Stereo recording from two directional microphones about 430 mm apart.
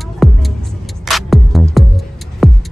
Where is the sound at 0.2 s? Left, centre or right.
Centre.